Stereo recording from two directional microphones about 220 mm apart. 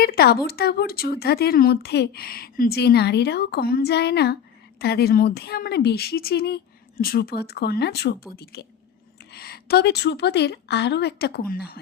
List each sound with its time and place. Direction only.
0.0 s speech: 45° left (ahead or behind)